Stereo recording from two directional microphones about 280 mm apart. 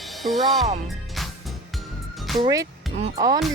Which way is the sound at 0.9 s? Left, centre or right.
Centre.